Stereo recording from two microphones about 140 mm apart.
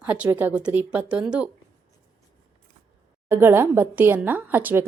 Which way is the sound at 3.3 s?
15° right (ahead or behind).